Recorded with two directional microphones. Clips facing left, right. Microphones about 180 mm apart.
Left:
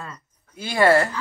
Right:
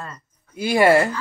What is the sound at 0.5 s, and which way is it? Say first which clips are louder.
Speech: right 2 dB; 15° right (ahead or behind).